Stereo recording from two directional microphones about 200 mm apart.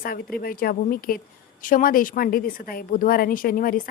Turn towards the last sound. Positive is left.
turn(degrees=45)  # may be behind; listen again after turning